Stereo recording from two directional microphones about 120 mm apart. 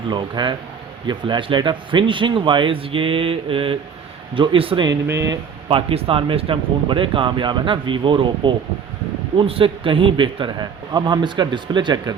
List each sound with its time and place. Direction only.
0.1 s a man's voice: 40° right (ahead or behind)
5.0 s speech: 25° right (ahead or behind)
5.6 s a man's voice: 50° right (ahead or behind)